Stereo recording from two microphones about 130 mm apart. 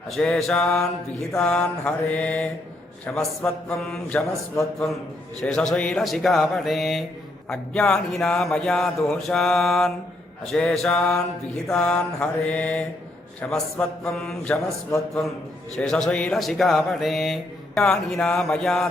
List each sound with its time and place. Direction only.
0.1 s speech: 5° left (ahead or behind)
1.4 s mantra: 10° left (ahead or behind)
3.8 s speech: 5° left (ahead or behind)
5.4 s speech: 5° left (ahead or behind)
11.7 s mantra: 5° left (ahead or behind)
13.4 s speech: 10° left (ahead or behind)
14.8 s a man's voice: 25° left (ahead or behind)
15.7 s speech: 5° left (ahead or behind)